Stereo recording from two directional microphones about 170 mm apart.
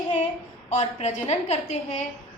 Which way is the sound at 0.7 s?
40° left (ahead or behind).